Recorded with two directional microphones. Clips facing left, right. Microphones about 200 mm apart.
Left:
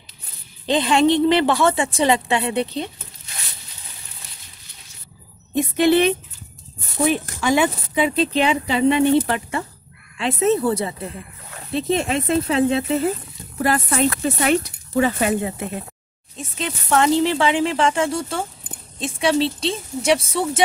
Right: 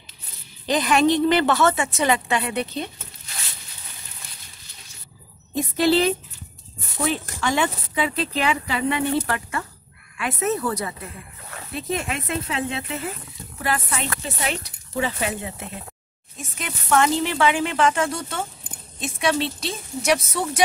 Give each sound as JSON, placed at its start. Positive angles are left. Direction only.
{"t": 0.7, "sound": "speech", "side_deg": 25}
{"t": 5.5, "sound": "speech", "side_deg": 20}
{"t": 16.3, "sound": "speech", "side_deg": 30}